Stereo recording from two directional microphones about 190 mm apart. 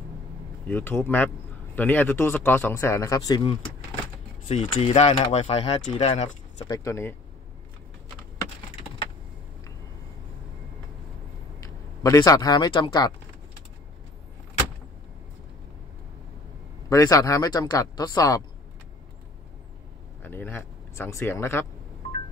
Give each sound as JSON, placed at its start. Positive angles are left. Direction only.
{"t": 0.7, "sound": "speech", "side_deg": 10}
{"t": 4.5, "sound": "speech", "side_deg": 30}
{"t": 6.6, "sound": "speech", "side_deg": 20}
{"t": 11.6, "sound": "speech", "side_deg": 15}
{"t": 16.9, "sound": "speech", "side_deg": 15}
{"t": 20.2, "sound": "speech", "side_deg": 10}